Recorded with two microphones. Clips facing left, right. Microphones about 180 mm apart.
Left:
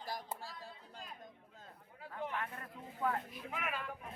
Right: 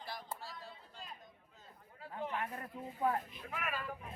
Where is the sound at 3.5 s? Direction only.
20° left (ahead or behind).